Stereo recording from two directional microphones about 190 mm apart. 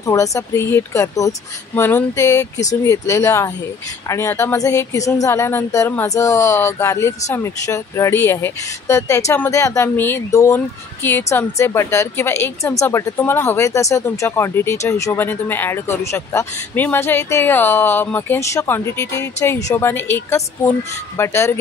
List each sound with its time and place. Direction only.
0.0 s speech: 15° left (ahead or behind)